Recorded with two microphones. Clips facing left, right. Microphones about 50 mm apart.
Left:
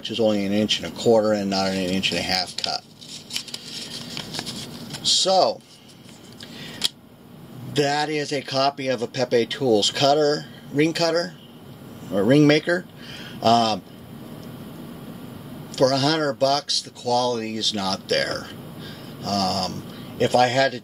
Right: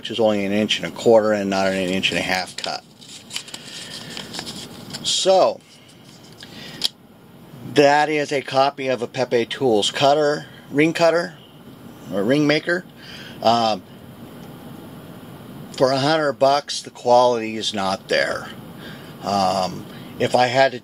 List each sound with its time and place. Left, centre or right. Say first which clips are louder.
0.0 s speech: right 2 dB; right
3.3 s scissors: right 1 dB; centre
5.0 s a sound: right 3 dB; right
6.6 s a sound: even; centre
7.7 s speech: right 7 dB; right
8.5 s speech: right 3 dB; centre
12.1 s speech: left 2 dB; centre
15.7 s speech: right 2 dB; centre
16.3 s speech: right 4 dB; right